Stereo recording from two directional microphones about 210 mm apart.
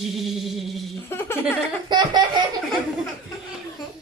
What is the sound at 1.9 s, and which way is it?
Laughter, 20° right (ahead or behind).